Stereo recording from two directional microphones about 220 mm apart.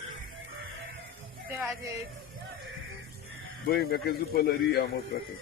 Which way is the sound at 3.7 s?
45° left (ahead or behind).